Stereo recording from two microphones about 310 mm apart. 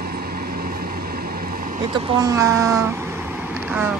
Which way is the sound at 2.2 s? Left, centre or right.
Centre.